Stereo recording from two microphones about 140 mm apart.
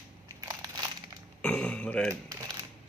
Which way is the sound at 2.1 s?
25° right (ahead or behind).